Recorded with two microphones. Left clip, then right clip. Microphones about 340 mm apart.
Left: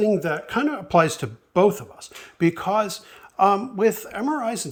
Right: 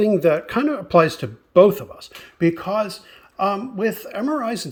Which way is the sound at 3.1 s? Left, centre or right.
Centre.